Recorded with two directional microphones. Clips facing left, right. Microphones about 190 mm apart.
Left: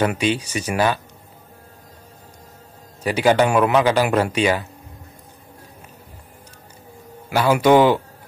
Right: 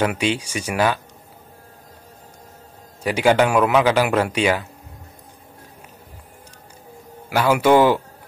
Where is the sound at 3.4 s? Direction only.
10° left (ahead or behind).